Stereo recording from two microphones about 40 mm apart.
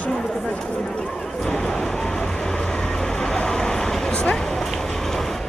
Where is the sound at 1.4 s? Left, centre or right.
Centre.